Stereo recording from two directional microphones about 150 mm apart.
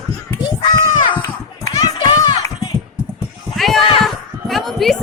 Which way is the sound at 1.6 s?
25° left (ahead or behind).